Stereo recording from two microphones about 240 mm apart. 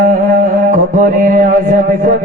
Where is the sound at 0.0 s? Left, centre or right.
Right.